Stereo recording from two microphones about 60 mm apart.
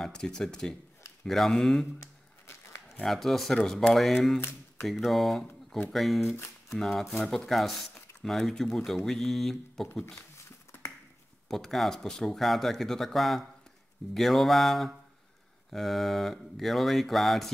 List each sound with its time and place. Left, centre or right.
0.0 s speech: centre
2.0 s crumpling: left
3.1 s speech: centre
4.4 s a sound: left
4.8 s speech: centre
10.3 s a sound: left
11.4 s speech: centre